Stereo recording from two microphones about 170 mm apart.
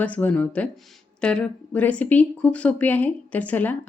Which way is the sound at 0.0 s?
10° left (ahead or behind).